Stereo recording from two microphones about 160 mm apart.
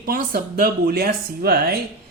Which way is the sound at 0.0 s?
70° right (ahead or behind).